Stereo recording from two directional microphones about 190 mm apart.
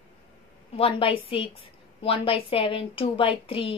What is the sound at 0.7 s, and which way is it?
A woman's voice, 30° left (ahead or behind).